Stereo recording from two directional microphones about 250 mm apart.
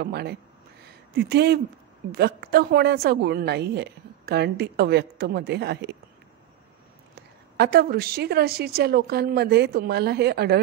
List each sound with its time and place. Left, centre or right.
0.0 s a woman's voice: right
0.8 s a sound: right
2.1 s a woman's voice: right
7.5 s a woman's voice: right